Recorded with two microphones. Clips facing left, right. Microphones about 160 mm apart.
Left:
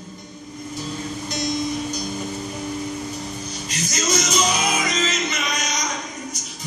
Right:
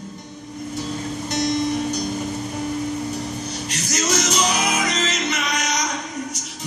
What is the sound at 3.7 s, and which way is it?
Music, 70° right (ahead or behind).